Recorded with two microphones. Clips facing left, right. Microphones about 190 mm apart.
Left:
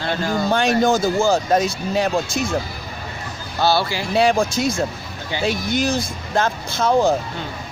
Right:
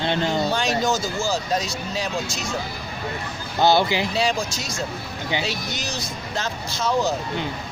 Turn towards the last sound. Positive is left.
turn(degrees=55)  # may be behind; listen again after turning